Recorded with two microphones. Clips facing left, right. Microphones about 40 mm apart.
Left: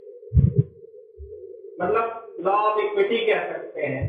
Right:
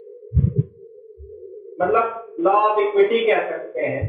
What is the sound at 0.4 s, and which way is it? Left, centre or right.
Music, centre.